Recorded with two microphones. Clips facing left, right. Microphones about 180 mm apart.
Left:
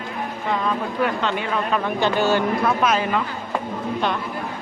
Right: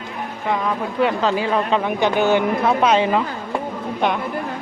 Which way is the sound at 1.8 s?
15° right (ahead or behind).